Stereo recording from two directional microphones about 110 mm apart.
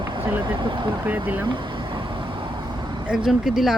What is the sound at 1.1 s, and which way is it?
Speech, 15° right (ahead or behind).